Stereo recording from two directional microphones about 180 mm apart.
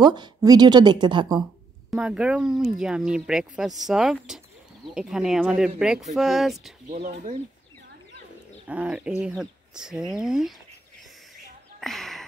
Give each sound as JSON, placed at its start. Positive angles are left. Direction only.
{"t": 0.0, "sound": "a woman's voice", "side_deg": -25}
{"t": 1.9, "sound": "speech", "side_deg": -5}
{"t": 6.9, "sound": "speech", "side_deg": -50}
{"t": 8.6, "sound": "speech", "side_deg": -10}
{"t": 11.8, "sound": "a sound", "side_deg": 0}